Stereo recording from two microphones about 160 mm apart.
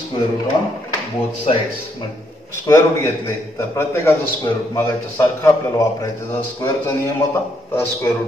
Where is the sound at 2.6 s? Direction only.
20° left (ahead or behind).